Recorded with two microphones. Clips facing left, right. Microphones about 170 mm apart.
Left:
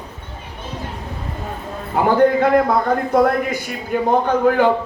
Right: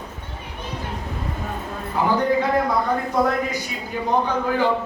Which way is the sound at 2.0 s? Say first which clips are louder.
Left 6 dB; 55° left (ahead or behind).